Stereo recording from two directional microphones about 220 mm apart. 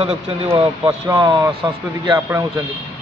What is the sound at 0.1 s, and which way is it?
Speech, 10° right (ahead or behind).